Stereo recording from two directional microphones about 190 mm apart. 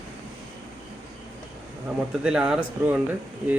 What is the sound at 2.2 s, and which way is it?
Speech, 5° right (ahead or behind).